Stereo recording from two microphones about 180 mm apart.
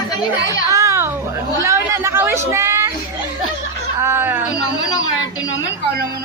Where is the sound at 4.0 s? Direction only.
10° right (ahead or behind).